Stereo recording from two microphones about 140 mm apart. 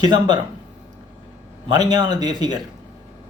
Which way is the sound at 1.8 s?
30° right (ahead or behind).